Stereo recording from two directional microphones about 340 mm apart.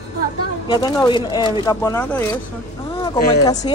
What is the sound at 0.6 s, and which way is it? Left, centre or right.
Speech, centre.